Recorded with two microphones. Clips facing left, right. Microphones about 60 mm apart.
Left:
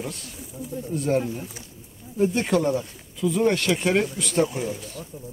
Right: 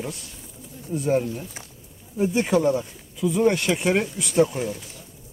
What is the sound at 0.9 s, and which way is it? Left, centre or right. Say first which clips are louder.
Speech: right 2 dB; centre.